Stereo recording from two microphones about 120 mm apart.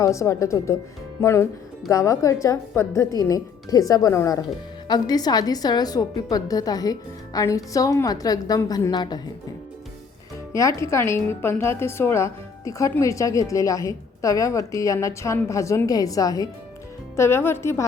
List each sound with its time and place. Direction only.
0.0 s a woman's voice: 25° left (ahead or behind)
10.5 s speech: 25° left (ahead or behind)
17.2 s speech: 20° left (ahead or behind)